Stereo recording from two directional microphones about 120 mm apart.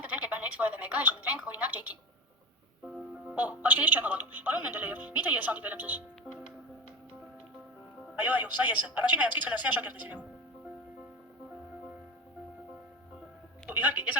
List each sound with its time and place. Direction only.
0.0 s speech: 15° right (ahead or behind)
8.1 s speech: 15° right (ahead or behind)
13.7 s speech: 15° right (ahead or behind)